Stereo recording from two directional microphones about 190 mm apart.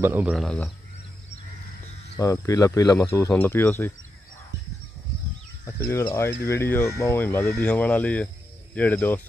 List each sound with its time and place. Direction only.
0.0 s speech: 10° right (ahead or behind)
2.1 s speech: 15° left (ahead or behind)
5.8 s speech: 10° left (ahead or behind)